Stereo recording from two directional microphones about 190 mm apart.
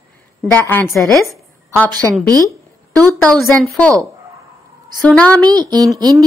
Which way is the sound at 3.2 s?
Centre (ahead or behind).